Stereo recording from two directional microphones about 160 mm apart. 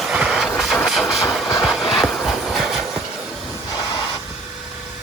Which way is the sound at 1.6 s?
Centre (ahead or behind).